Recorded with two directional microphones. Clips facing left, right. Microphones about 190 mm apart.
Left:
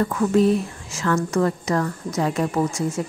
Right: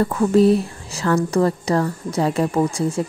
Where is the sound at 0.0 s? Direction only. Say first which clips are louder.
Right 3 dB; 30° right (ahead or behind).